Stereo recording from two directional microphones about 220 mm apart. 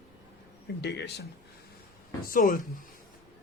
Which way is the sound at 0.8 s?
50° left (ahead or behind).